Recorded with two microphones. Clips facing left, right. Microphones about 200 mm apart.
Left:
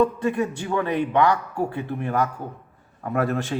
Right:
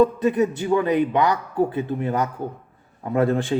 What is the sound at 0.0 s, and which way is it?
A man's voice, 20° right (ahead or behind).